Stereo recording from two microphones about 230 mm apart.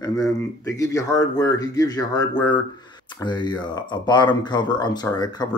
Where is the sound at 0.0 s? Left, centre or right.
Centre.